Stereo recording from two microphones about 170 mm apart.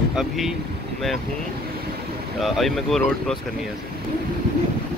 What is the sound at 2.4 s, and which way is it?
Speech, centre (ahead or behind).